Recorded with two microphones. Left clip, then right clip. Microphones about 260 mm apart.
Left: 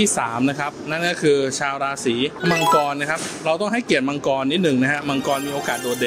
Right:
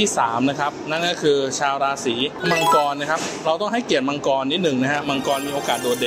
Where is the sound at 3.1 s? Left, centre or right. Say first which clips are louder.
Right 1 dB; left.